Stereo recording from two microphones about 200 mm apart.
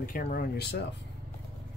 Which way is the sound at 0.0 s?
45° left (ahead or behind).